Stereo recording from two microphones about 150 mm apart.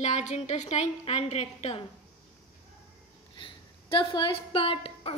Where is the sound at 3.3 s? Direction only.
35° left (ahead or behind).